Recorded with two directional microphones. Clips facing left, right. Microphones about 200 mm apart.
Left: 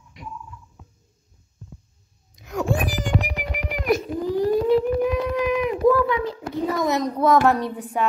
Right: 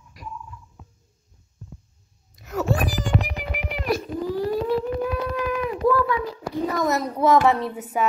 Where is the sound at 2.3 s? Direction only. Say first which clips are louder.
Even; 5° right (ahead or behind).